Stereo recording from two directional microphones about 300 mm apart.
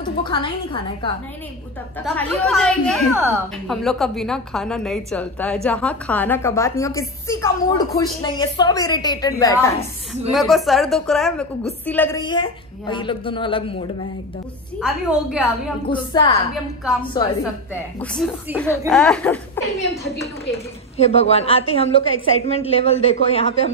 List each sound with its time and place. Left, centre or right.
0.2 s a woman's voice: centre
2.1 s a woman's voice: centre
10.3 s a woman's voice: centre
14.8 s a woman's voice: centre
15.9 s a woman's voice: centre
18.0 s a woman's voice: centre
21.0 s a woman's voice: left